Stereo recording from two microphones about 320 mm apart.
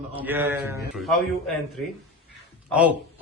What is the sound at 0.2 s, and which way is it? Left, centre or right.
A man's voice, centre.